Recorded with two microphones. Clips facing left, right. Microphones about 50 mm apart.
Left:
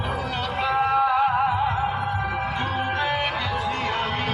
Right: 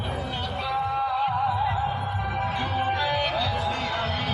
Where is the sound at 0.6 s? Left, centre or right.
Left.